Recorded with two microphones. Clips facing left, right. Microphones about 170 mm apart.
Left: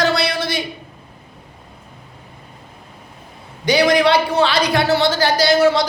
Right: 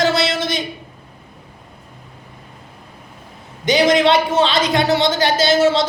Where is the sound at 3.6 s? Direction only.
20° right (ahead or behind).